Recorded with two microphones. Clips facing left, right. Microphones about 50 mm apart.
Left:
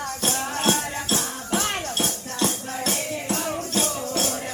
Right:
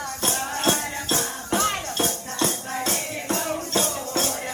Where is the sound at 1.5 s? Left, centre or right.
Left.